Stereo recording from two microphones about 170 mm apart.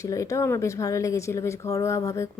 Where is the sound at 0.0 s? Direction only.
20° left (ahead or behind).